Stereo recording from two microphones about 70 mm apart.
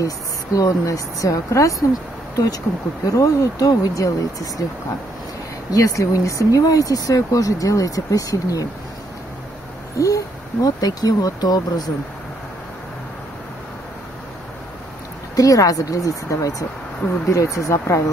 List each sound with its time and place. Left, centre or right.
0.0 s speech: left
2.3 s speech: left
5.7 s speech: left
9.9 s speech: left
15.3 s speech: left